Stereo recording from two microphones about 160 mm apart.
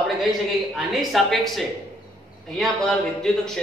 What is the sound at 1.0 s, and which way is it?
Speech, centre (ahead or behind).